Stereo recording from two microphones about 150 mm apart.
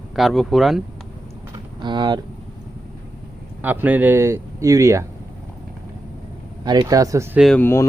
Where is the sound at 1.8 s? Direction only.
30° right (ahead or behind).